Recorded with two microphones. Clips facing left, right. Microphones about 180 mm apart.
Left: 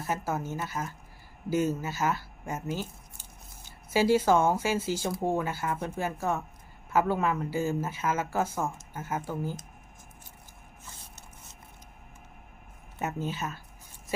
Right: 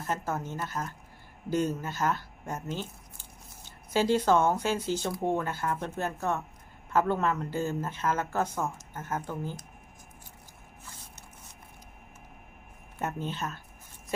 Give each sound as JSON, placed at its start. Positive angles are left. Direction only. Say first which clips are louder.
{"t": 0.0, "sound": "speech", "louder": "left 1 dB", "side_deg": 10}
{"t": 13.0, "sound": "speech", "louder": "left 1 dB", "side_deg": 5}